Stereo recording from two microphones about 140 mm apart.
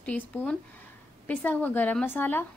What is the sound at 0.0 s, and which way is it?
A woman's voice, 10° left (ahead or behind).